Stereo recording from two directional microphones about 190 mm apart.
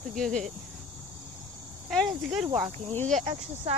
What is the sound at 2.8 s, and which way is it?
Speech, 5° left (ahead or behind).